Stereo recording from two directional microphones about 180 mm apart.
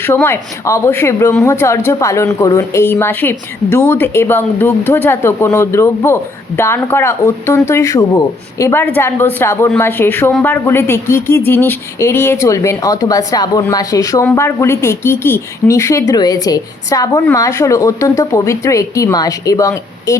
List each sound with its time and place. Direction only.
0.0 s a woman's voice: 10° left (ahead or behind)